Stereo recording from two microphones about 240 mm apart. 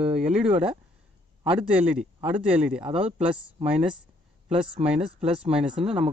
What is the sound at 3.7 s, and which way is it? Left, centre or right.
Speech, centre.